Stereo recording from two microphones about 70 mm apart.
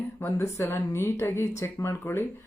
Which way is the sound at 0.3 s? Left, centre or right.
Left.